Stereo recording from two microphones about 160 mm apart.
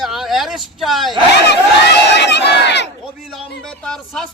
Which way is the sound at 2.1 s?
90° left.